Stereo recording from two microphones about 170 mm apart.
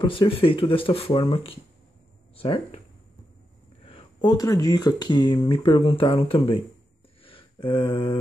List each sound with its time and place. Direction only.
0.0 s speech: 30° left (ahead or behind)
3.8 s speech: 30° left (ahead or behind)
7.2 s a sound: 30° left (ahead or behind)